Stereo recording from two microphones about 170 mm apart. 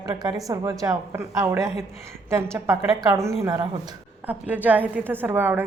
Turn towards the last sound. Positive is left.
turn(degrees=-10)  # may be behind; listen again after turning